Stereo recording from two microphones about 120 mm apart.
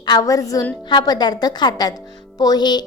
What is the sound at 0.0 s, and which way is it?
A woman's voice, 35° left (ahead or behind).